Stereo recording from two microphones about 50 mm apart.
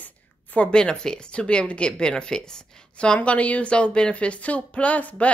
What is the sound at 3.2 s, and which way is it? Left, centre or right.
A woman's voice, left.